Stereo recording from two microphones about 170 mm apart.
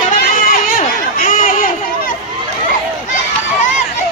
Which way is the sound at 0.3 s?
55° left (ahead or behind).